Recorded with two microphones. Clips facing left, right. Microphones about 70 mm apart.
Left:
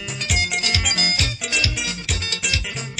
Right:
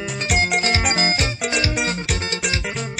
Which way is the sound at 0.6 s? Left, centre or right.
Right.